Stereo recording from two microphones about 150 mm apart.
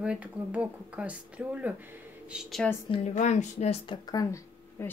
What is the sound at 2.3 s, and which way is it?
Speech, centre (ahead or behind).